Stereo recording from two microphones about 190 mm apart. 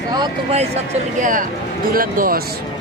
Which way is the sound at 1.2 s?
45° right (ahead or behind).